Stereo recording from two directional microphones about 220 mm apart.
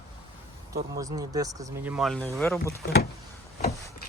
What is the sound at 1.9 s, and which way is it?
Speech, centre (ahead or behind).